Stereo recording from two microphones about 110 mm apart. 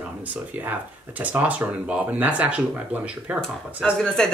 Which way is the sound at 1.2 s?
15° right (ahead or behind).